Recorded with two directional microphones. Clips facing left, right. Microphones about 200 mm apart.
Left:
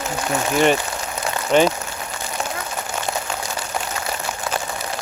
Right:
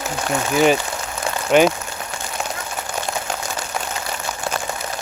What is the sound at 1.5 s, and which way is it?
Speech, 5° right (ahead or behind).